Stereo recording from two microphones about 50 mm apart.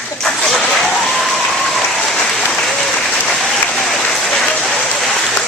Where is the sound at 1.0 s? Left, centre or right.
Centre.